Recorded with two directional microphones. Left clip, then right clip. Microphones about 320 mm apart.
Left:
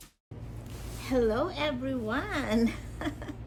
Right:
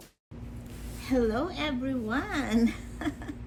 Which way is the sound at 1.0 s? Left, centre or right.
Centre.